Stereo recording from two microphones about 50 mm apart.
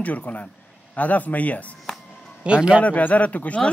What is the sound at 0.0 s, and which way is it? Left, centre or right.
Speech, left.